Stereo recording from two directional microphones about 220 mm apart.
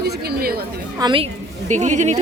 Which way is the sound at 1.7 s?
30° right (ahead or behind).